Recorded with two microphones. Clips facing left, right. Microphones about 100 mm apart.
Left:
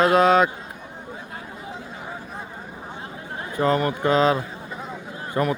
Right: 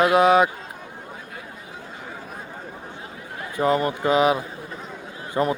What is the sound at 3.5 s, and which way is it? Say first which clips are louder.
A man's voice: even; 20° right (ahead or behind).